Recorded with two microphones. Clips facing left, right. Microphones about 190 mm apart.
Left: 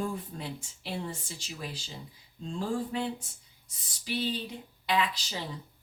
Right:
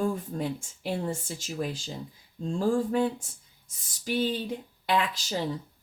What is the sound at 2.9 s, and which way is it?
Speech, 50° right (ahead or behind).